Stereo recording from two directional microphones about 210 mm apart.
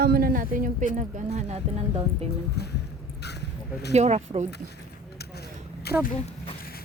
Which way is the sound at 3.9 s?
30° right (ahead or behind).